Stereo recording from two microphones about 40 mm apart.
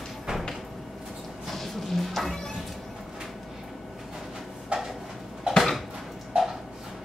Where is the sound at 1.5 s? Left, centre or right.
Centre.